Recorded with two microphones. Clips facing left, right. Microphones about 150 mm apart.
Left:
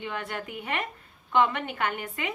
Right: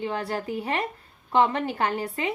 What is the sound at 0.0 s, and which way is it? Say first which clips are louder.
A woman's voice: right 5 dB; 35° right (ahead or behind).